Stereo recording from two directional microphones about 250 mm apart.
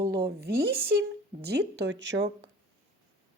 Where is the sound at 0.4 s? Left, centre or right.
Right.